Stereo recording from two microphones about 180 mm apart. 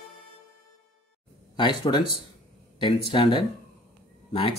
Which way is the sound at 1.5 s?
25° left (ahead or behind).